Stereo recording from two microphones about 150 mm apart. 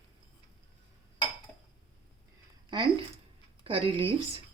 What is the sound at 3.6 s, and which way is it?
Speech, 35° right (ahead or behind).